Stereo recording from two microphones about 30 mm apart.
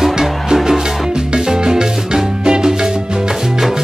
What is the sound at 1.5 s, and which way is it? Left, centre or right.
Music, right.